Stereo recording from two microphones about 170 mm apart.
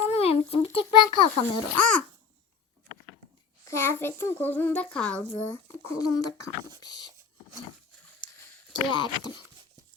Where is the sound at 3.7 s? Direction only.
15° left (ahead or behind).